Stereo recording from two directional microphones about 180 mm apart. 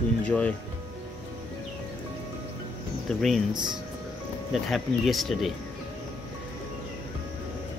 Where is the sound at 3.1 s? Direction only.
Centre (ahead or behind).